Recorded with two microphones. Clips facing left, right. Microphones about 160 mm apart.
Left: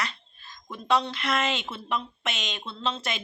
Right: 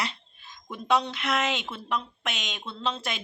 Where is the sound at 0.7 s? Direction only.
5° right (ahead or behind).